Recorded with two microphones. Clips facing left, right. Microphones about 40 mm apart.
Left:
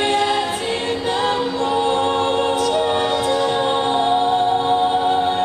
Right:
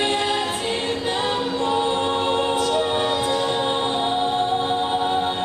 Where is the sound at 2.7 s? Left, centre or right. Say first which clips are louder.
Left 3 dB; centre.